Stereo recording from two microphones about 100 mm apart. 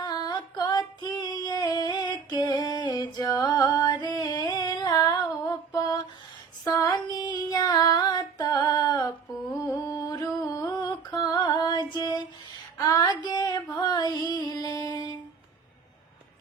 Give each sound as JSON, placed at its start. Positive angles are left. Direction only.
{"t": 0.0, "sound": "female singing", "side_deg": 45}
{"t": 9.6, "sound": "a sound", "side_deg": 35}
{"t": 12.8, "sound": "female singing", "side_deg": 40}